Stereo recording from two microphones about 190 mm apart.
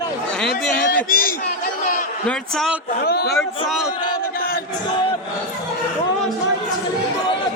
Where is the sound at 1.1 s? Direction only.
50° left (ahead or behind).